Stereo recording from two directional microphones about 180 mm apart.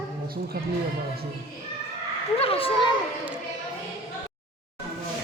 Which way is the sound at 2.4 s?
30° left (ahead or behind).